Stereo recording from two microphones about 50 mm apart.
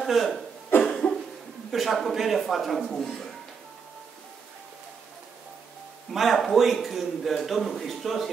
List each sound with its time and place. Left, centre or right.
0.0 s speech: centre
0.8 s cough: centre
1.7 s a man's voice: centre
6.1 s a man's voice: centre